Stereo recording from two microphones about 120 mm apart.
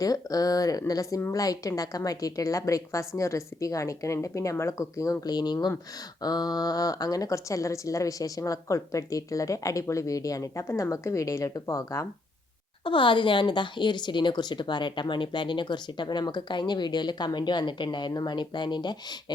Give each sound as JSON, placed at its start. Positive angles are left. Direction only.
{"t": 0.0, "sound": "speech", "side_deg": 30}
{"t": 12.8, "sound": "speech", "side_deg": 45}